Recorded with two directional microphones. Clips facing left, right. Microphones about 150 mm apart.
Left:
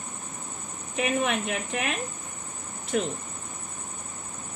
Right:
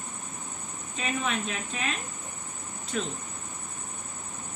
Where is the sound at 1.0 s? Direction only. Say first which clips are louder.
Left 5 dB; 75° left (ahead or behind).